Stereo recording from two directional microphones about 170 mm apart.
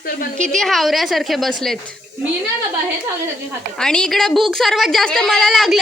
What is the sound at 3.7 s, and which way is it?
A woman's voice, 5° left (ahead or behind).